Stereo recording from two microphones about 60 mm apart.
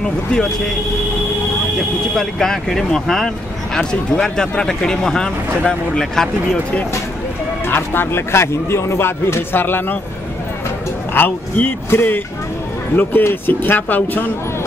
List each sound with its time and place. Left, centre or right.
0.0 s speech: centre
1.8 s speech: centre
7.6 s speech: left
11.1 s speech: left